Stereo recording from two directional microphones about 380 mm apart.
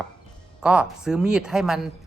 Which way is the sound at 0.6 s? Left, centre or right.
Centre.